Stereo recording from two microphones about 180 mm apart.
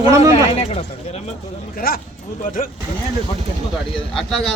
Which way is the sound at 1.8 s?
55° left (ahead or behind).